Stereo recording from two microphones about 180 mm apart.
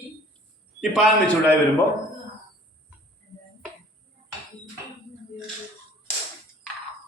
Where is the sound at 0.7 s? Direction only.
Centre (ahead or behind).